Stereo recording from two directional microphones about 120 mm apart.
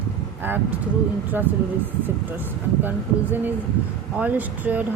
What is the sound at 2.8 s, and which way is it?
Speech, 15° right (ahead or behind).